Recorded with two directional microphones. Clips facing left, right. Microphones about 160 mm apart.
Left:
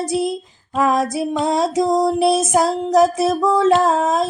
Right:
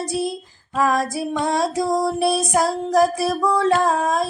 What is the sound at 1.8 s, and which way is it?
Female singing, 20° left (ahead or behind).